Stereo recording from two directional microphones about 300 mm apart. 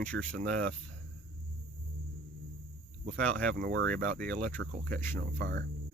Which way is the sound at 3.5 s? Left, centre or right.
Right.